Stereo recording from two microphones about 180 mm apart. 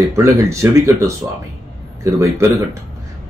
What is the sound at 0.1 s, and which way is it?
Speech, 15° right (ahead or behind).